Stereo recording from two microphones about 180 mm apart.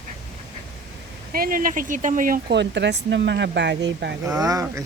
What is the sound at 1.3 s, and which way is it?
Speech, 55° right (ahead or behind).